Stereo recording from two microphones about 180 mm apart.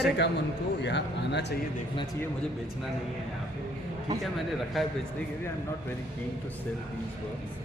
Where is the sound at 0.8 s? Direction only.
75° left (ahead or behind).